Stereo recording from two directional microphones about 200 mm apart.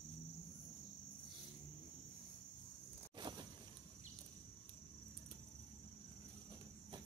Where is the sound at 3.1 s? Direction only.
25° right (ahead or behind).